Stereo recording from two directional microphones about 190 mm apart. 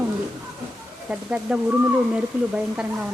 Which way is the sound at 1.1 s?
5° right (ahead or behind).